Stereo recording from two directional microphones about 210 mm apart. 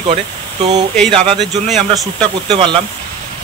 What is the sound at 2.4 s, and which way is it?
Speech, 25° right (ahead or behind).